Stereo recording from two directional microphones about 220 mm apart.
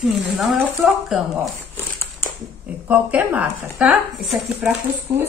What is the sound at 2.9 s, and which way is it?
Speech, 5° right (ahead or behind).